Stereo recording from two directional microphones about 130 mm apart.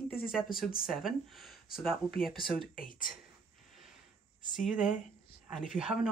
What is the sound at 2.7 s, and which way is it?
Speech, 90° left.